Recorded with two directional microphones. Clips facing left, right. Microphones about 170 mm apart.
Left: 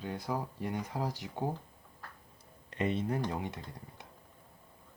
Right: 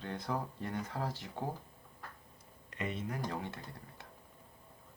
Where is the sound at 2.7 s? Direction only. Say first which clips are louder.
Left 7 dB; 30° left (ahead or behind).